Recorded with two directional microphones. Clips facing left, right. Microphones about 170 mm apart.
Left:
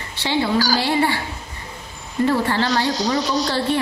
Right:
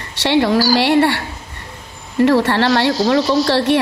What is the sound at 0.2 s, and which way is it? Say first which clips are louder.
A woman's voice: right 6 dB; 80° right.